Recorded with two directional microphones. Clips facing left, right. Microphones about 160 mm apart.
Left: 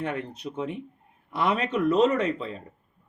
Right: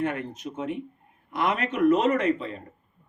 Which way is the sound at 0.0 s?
35° left (ahead or behind).